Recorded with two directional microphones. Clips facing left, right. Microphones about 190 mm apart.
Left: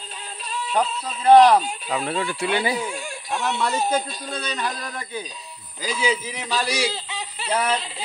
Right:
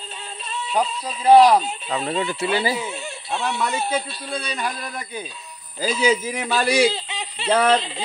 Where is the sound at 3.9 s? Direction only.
10° right (ahead or behind).